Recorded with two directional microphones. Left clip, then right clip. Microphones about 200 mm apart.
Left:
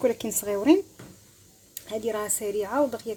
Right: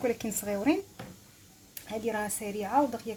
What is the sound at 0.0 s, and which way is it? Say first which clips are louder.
Speech: left 5 dB; 40° left (ahead or behind).